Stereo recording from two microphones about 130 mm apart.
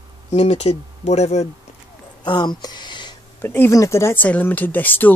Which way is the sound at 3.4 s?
15° left (ahead or behind).